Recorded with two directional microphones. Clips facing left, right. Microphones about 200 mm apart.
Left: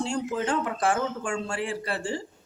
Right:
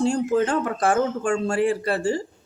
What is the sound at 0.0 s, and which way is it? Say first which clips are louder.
Speech: right 7 dB; 45° right (ahead or behind).